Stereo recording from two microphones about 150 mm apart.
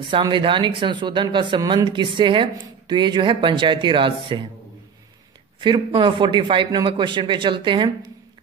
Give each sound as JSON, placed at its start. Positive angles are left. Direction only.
{"t": 0.0, "sound": "speech", "side_deg": -30}
{"t": 5.6, "sound": "speech", "side_deg": -35}